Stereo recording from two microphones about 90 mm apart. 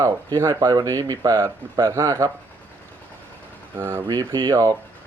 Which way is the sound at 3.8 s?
25° right (ahead or behind).